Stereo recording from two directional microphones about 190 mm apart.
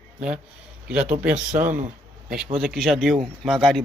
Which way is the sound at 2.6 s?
Centre (ahead or behind).